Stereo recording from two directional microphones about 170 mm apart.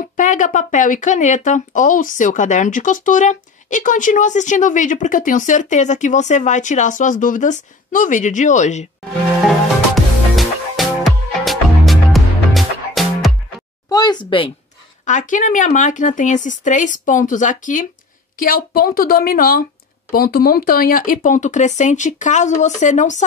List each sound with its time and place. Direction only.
0.0 s speech: 50° left (ahead or behind)
9.4 s music: centre (ahead or behind)
13.8 s a woman's voice: 25° left (ahead or behind)
15.0 s speech: 45° left (ahead or behind)